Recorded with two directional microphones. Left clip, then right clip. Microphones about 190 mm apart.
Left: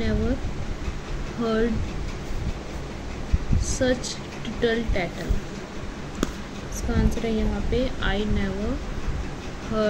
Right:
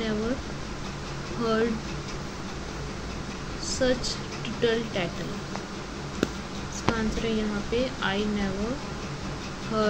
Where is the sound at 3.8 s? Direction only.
10° left (ahead or behind).